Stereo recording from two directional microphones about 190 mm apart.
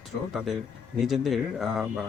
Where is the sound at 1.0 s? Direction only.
Centre (ahead or behind).